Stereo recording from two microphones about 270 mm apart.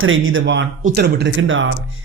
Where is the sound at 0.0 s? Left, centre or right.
Right.